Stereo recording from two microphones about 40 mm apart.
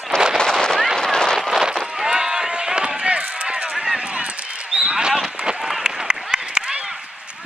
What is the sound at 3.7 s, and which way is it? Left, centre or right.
Run, centre.